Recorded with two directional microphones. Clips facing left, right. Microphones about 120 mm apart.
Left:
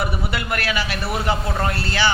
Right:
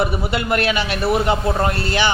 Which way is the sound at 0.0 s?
25° right (ahead or behind).